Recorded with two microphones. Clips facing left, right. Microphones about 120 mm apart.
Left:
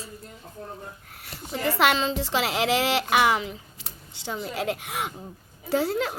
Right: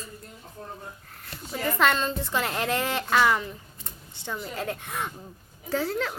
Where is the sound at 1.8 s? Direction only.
90° left.